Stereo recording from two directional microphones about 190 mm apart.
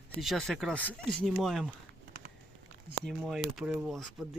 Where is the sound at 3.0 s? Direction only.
Centre (ahead or behind).